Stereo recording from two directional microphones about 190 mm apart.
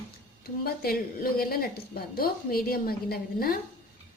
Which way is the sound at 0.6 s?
50° left (ahead or behind).